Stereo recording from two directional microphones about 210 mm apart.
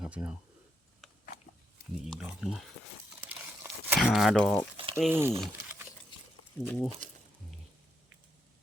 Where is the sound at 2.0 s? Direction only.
Centre (ahead or behind).